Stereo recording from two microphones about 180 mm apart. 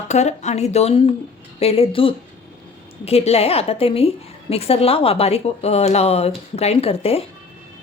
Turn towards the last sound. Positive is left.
turn(degrees=35)  # may be behind; listen again after turning